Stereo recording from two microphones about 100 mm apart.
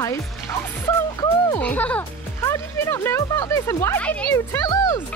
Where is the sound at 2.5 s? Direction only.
25° left (ahead or behind).